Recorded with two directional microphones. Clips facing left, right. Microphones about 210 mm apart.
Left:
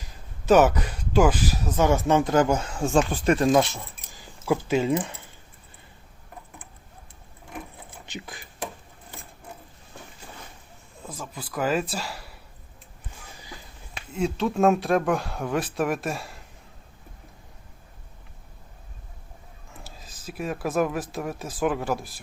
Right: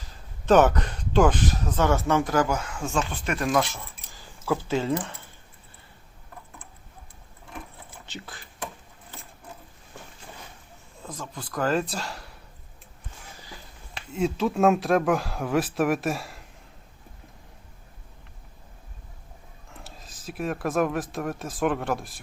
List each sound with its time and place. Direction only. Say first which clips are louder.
0.4 s speech: left 1 dB; 5° left (ahead or behind); by 3.7 s 25° left (ahead or behind)
4.1 s speech: left 2 dB; 15° left (ahead or behind)
8.0 s speech: left 3 dB; 15° left (ahead or behind)
11.0 s speech: even; 5° left (ahead or behind)
14.1 s speech: right 1 dB; centre (ahead or behind)
19.7 s speech: even; centre (ahead or behind)